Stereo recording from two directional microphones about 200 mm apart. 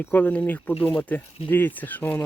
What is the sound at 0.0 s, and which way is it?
Speech, 10° left (ahead or behind).